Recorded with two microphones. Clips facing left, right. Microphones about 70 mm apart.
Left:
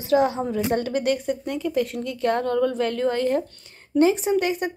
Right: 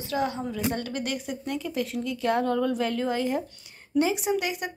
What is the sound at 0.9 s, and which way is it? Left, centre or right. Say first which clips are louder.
A woman's voice: left 8 dB; centre.